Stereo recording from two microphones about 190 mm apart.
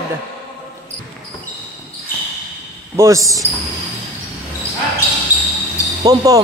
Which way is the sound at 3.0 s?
15° right (ahead or behind).